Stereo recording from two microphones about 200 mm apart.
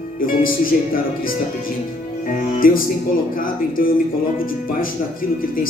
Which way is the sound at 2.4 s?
45° left (ahead or behind).